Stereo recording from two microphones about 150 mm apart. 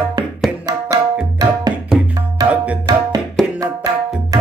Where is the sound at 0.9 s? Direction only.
25° right (ahead or behind).